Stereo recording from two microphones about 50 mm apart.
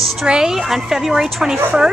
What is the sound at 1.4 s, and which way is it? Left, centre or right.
Speech, centre.